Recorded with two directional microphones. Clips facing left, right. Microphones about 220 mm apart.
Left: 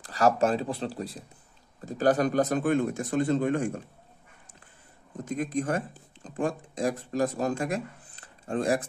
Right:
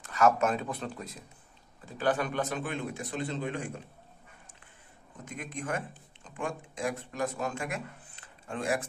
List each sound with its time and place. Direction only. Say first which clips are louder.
0.0 s a man's voice: left 2 dB; 35° left (ahead or behind)
5.2 s speech: left 10 dB; 35° left (ahead or behind)